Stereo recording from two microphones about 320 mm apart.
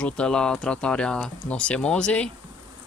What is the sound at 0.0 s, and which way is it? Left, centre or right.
Speech, centre.